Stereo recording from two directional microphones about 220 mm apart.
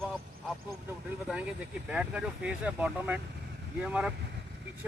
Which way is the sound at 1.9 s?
5° right (ahead or behind).